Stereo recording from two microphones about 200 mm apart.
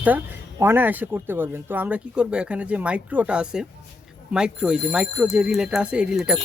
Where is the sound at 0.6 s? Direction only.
10° right (ahead or behind).